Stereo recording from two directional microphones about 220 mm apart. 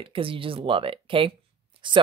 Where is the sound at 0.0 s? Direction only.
25° right (ahead or behind).